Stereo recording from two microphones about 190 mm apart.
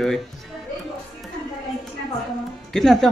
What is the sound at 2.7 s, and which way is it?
Speech, centre (ahead or behind).